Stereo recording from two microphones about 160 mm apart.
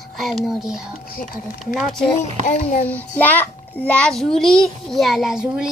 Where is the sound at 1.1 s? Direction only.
65° left (ahead or behind).